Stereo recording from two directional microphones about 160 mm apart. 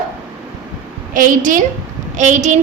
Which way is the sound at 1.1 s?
55° right (ahead or behind).